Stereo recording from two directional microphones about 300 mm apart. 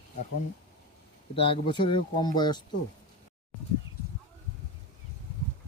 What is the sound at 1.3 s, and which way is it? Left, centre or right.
Speech, centre.